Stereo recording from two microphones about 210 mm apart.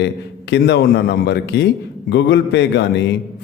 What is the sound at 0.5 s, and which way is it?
A man's voice, 55° left (ahead or behind).